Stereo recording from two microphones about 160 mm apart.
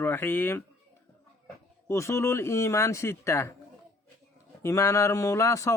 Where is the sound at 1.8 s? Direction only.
20° left (ahead or behind).